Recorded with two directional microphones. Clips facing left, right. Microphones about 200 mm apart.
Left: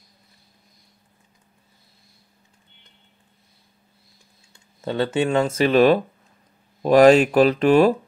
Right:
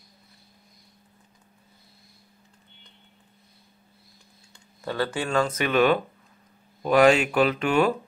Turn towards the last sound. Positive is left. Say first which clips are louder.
# left 7 dB
turn(degrees=35)  # may be behind; listen again after turning